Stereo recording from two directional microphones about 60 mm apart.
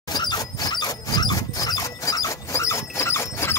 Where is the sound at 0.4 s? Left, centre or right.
Left.